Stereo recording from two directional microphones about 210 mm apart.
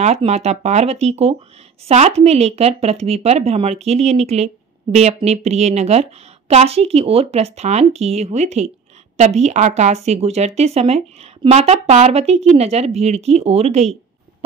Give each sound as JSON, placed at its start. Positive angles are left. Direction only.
{"t": 0.0, "sound": "speech", "side_deg": -30}